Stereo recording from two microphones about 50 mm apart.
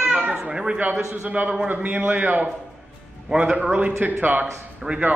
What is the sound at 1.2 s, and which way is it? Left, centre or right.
A man's voice, right.